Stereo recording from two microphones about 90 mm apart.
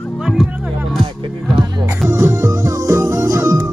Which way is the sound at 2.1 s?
30° right (ahead or behind).